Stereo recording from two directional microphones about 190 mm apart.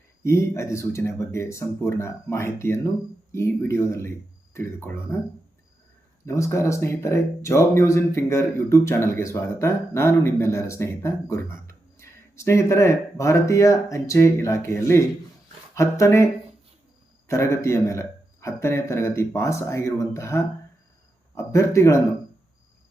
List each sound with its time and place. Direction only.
0.2 s speech: 15° left (ahead or behind)
6.2 s speech: 15° left (ahead or behind)